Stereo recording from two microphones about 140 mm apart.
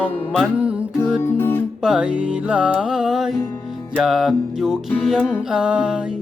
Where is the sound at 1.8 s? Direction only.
5° right (ahead or behind).